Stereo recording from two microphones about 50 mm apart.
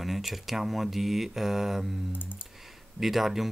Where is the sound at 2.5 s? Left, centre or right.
Centre.